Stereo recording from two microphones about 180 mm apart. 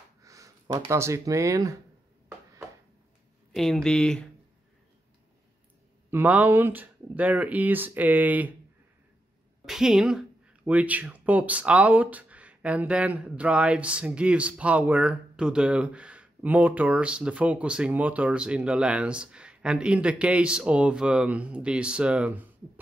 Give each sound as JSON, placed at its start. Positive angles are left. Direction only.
{"t": 0.2, "sound": "speech", "side_deg": -20}
{"t": 3.5, "sound": "speech", "side_deg": 0}
{"t": 6.0, "sound": "speech", "side_deg": -10}
{"t": 9.7, "sound": "speech", "side_deg": 0}